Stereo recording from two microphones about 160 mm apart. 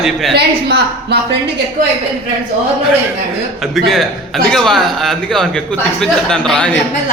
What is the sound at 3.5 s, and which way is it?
A man's voice, centre (ahead or behind).